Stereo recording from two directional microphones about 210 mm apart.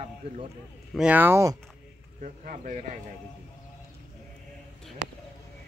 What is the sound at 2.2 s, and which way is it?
Speech, 35° right (ahead or behind).